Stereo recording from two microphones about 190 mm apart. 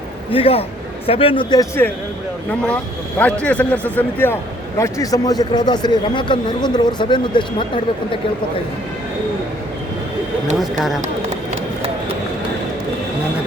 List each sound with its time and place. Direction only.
0.3 s a man's voice: 30° left (ahead or behind)
3.2 s a man's voice: 5° left (ahead or behind); by 7.4 s 25° left (ahead or behind)
10.6 s speech: centre (ahead or behind)